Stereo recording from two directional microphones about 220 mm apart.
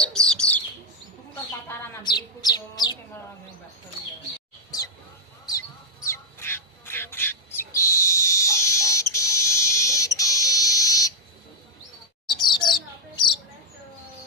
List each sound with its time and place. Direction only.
0.0 s bird: 5° left (ahead or behind)
1.7 s chirp: 20° left (ahead or behind)
4.6 s bird: 15° left (ahead or behind)
6.0 s bird: 10° left (ahead or behind)
9.1 s fire alarm: 15° left (ahead or behind)
12.3 s chirp: 20° left (ahead or behind)